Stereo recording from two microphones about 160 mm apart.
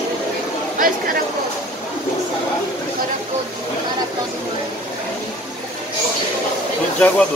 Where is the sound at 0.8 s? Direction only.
60° right (ahead or behind).